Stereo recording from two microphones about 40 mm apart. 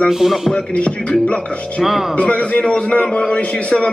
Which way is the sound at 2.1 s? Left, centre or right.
Left.